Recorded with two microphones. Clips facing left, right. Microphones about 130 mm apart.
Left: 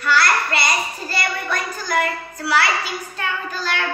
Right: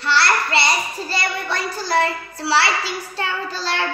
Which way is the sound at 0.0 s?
30° right (ahead or behind).